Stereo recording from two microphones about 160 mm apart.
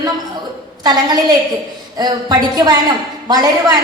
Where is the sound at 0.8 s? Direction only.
25° right (ahead or behind).